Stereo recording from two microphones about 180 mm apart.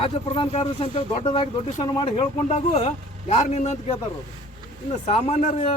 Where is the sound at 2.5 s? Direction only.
40° left (ahead or behind).